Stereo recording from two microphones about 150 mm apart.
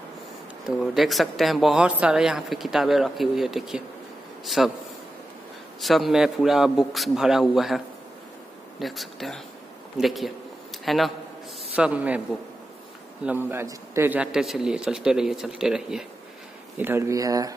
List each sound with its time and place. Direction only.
0.7 s speech: centre (ahead or behind)
5.8 s a man's voice: centre (ahead or behind)
13.2 s speech: 10° right (ahead or behind)
16.7 s speech: 15° right (ahead or behind)